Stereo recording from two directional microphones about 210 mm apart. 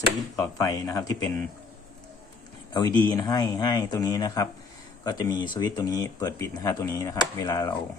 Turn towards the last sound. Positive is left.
turn(degrees=15)  # may be behind; listen again after turning